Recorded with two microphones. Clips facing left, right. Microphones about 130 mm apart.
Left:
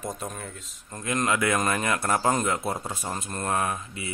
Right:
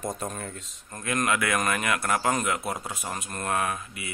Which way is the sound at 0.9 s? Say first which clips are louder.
Left 1 dB; 20° left (ahead or behind).